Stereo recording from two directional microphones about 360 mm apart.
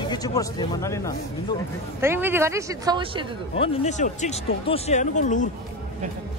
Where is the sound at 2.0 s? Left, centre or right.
Centre.